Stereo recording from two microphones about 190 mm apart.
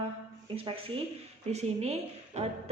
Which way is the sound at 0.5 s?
30° right (ahead or behind).